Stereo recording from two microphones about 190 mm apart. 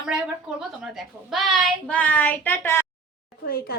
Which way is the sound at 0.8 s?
Centre (ahead or behind).